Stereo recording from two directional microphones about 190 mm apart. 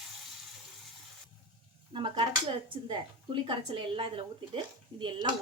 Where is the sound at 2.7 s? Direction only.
25° right (ahead or behind).